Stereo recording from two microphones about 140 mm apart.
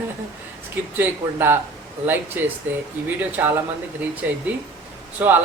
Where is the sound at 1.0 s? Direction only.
15° right (ahead or behind).